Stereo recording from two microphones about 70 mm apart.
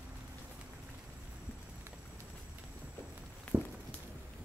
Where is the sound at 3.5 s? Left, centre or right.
Right.